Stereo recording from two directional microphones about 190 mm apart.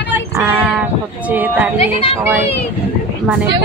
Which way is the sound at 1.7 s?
30° left (ahead or behind).